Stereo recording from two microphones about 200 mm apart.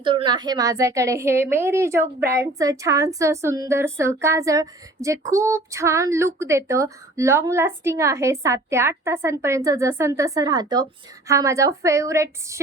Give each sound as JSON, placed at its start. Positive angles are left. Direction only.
{"t": 0.0, "sound": "a woman's voice", "side_deg": -25}